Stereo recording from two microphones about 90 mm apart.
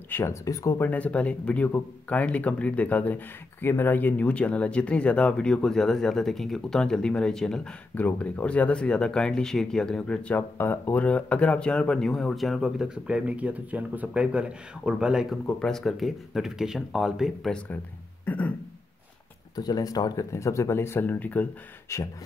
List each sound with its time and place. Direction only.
0.1 s speech: 35° left (ahead or behind)
0.7 s speech: 20° left (ahead or behind)
7.9 s speech: 20° left (ahead or behind); by 15.3 s 10° right (ahead or behind)
15.4 s speech: 5° left (ahead or behind)
18.2 s a sound: 15° left (ahead or behind)
19.5 s speech: 45° left (ahead or behind); by 21.5 s 20° left (ahead or behind)
21.8 s beatboxing: 35° left (ahead or behind)